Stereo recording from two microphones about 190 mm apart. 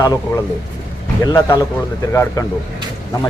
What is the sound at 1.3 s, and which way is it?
A man's voice, 15° left (ahead or behind).